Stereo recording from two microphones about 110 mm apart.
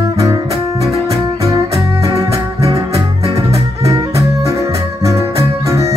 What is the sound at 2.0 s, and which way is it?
Music, 30° right (ahead or behind).